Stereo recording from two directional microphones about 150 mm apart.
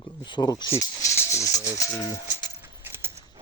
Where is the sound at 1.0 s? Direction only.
20° left (ahead or behind).